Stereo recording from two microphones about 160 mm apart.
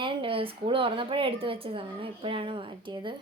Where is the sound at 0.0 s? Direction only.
30° right (ahead or behind).